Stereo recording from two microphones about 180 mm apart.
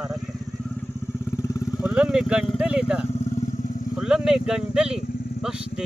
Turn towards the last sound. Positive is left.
turn(degrees=-5)  # may be behind; listen again after turning